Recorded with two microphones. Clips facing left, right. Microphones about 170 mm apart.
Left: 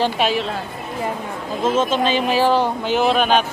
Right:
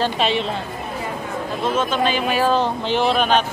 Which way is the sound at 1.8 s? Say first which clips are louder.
Left 2 dB; 25° left (ahead or behind).